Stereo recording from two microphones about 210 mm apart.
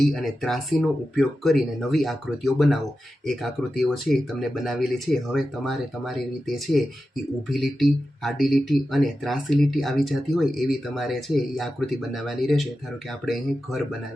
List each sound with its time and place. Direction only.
0.0 s speech: centre (ahead or behind)